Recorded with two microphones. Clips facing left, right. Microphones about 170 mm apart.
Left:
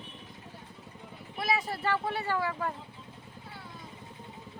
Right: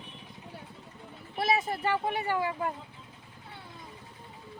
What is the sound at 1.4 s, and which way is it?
Speech, 25° right (ahead or behind).